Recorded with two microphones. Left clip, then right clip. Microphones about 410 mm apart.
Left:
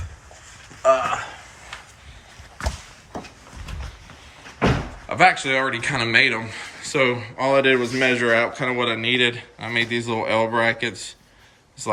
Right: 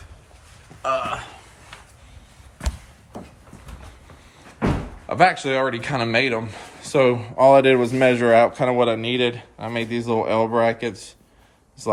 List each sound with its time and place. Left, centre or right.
0.8 s speech: centre
5.0 s speech: centre